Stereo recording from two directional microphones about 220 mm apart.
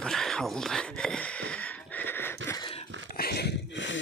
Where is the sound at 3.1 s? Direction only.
45° left (ahead or behind).